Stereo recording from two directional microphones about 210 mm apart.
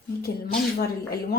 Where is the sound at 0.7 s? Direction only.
45° left (ahead or behind).